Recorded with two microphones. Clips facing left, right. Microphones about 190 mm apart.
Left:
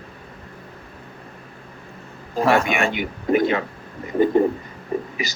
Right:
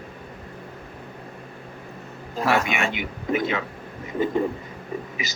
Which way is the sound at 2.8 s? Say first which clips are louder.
Left 4 dB; 50° left (ahead or behind).